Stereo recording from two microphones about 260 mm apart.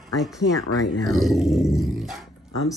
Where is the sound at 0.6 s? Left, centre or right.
Left.